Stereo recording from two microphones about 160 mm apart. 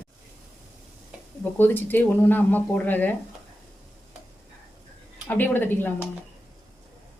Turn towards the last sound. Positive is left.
turn(degrees=10)  # may be behind; listen again after turning